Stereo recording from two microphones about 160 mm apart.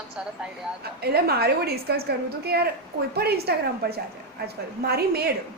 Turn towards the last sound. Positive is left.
turn(degrees=-80)